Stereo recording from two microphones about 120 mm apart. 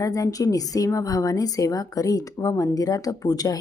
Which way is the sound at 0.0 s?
30° left (ahead or behind).